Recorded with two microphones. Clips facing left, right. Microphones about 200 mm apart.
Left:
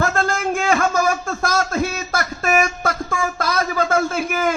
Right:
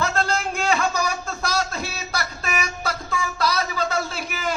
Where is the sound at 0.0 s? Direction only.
50° left (ahead or behind).